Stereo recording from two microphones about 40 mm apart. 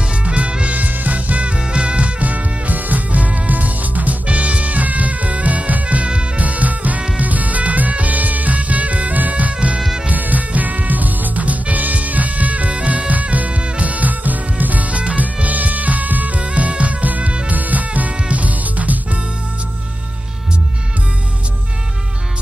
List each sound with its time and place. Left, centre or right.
0.2 s music: right
9.8 s music: centre
10.0 s music: right